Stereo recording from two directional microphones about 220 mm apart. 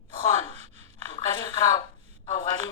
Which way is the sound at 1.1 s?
20° left (ahead or behind).